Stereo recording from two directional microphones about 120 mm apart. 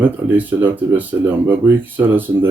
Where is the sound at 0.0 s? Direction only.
15° right (ahead or behind).